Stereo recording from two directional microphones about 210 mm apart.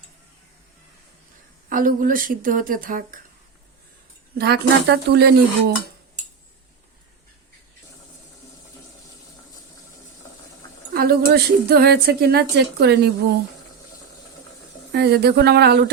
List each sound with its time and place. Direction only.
1.7 s speech: 40° right (ahead or behind)
4.4 s speech: 50° right (ahead or behind)
10.9 s speech: 50° right (ahead or behind)
14.9 s speech: 50° right (ahead or behind)